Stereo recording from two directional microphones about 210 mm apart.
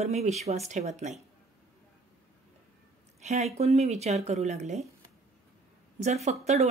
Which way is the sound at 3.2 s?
30° right (ahead or behind).